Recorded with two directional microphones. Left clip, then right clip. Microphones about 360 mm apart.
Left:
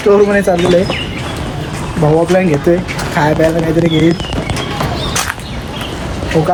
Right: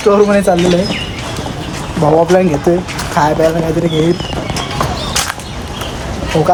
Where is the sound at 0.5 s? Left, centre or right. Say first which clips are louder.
Right 1 dB; centre.